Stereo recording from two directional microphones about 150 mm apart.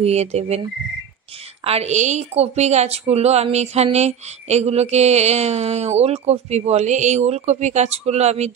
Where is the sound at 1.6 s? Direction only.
45° right (ahead or behind).